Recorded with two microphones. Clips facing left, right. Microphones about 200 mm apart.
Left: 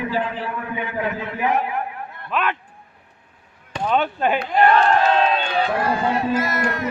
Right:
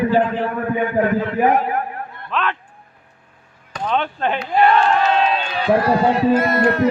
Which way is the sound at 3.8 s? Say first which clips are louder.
Left 1 dB; 5° left (ahead or behind).